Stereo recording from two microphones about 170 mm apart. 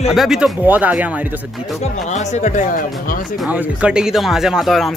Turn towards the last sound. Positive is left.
turn(degrees=0)  # may be behind; listen again after turning